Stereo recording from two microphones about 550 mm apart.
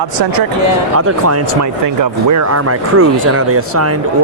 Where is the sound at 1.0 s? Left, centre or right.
Right.